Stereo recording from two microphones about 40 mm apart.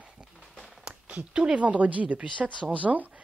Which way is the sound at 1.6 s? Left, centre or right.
Right.